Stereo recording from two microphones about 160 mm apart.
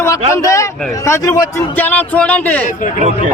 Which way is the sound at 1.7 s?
10° left (ahead or behind).